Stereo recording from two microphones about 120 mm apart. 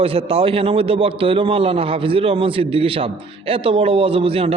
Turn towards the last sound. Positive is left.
turn(degrees=-50)  # may be behind; listen again after turning